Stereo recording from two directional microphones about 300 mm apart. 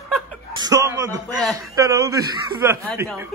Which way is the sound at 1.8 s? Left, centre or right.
Centre.